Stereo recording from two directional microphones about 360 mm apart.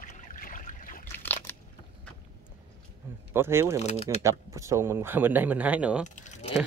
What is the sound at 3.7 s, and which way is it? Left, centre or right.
Speech, centre.